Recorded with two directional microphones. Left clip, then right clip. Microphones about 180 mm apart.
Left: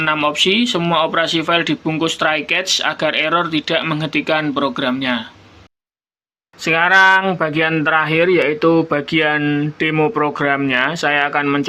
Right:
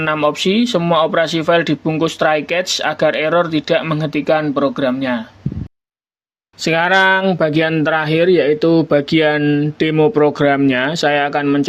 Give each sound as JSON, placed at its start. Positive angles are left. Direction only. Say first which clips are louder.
{"t": 0.0, "sound": "speech", "louder": "even", "side_deg": -45}
{"t": 6.7, "sound": "speech", "louder": "left 1 dB", "side_deg": -50}
{"t": 9.4, "sound": "speech", "louder": "right 2 dB", "side_deg": -35}
{"t": 10.2, "sound": "speech", "louder": "right 4 dB", "side_deg": -50}